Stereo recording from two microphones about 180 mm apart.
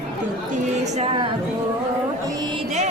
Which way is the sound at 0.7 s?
40° right (ahead or behind).